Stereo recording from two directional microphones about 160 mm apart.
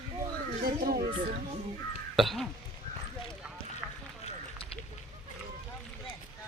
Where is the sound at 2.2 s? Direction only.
Centre (ahead or behind).